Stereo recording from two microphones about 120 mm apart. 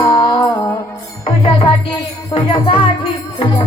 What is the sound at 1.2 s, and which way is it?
Music, 50° left (ahead or behind).